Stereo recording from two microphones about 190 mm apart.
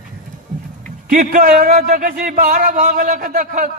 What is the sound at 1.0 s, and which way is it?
A man's voice, 45° right (ahead or behind).